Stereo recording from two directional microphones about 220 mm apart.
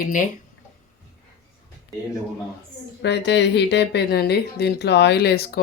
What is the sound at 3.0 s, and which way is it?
Speech, 50° left (ahead or behind).